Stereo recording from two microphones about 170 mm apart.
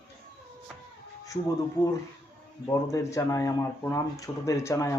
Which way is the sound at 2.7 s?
20° left (ahead or behind).